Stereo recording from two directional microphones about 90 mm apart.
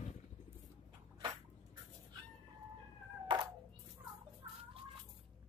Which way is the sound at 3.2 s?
55° right (ahead or behind).